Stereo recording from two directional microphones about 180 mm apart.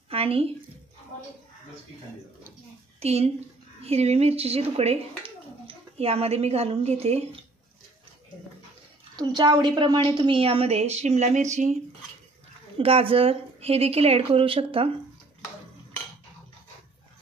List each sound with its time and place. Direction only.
0.1 s speech: 30° right (ahead or behind)
3.0 s a woman's voice: 35° right (ahead or behind)
9.1 s a woman's voice: 25° right (ahead or behind); by 11.4 s 40° right (ahead or behind)
12.7 s a woman's voice: 30° right (ahead or behind)